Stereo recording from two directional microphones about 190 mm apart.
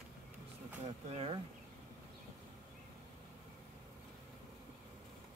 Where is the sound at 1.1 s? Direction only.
30° right (ahead or behind).